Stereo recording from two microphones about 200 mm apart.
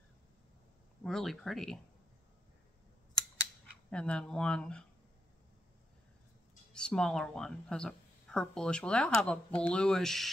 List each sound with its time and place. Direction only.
1.0 s speech: centre (ahead or behind)
3.9 s speech: 5° left (ahead or behind)
6.7 s speech: 5° left (ahead or behind)